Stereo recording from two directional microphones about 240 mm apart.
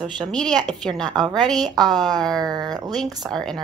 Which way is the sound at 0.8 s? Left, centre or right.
Centre.